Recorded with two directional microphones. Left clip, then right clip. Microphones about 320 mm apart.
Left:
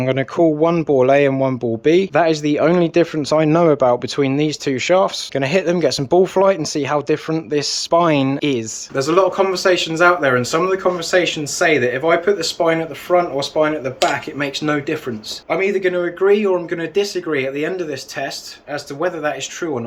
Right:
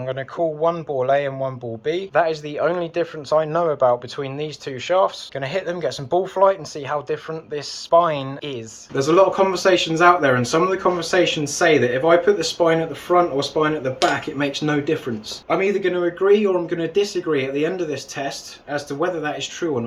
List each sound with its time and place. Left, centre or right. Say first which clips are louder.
0.0 s speech: left 7 dB; left
9.0 s speech: even; centre